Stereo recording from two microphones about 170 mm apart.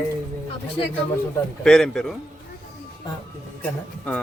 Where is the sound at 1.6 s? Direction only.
5° left (ahead or behind).